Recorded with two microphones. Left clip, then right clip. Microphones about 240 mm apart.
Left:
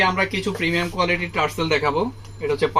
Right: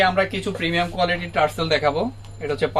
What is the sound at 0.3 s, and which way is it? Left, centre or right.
Speech, centre.